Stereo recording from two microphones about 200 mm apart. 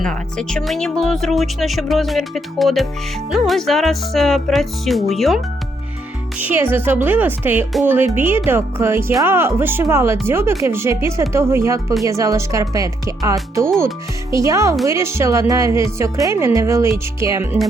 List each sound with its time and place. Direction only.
0.0 s speech: 5° left (ahead or behind)
6.4 s a woman's voice: 10° right (ahead or behind)